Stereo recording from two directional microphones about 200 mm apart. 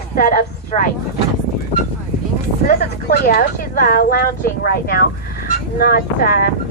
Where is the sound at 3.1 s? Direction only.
45° left (ahead or behind).